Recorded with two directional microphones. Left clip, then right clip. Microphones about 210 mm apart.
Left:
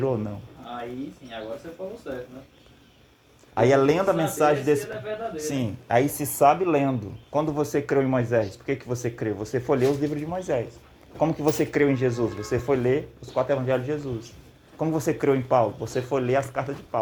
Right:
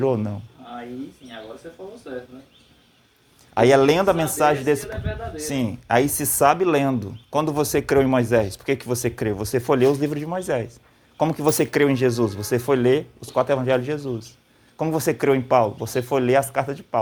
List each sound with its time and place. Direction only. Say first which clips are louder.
0.0 s speech: right 4 dB; 50° right (ahead or behind)
3.5 s speech: right 4 dB; 50° right (ahead or behind)